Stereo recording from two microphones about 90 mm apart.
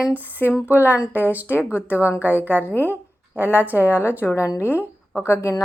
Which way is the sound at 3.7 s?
20° right (ahead or behind).